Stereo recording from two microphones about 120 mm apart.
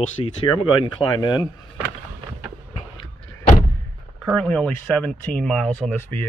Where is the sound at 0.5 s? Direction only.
45° left (ahead or behind).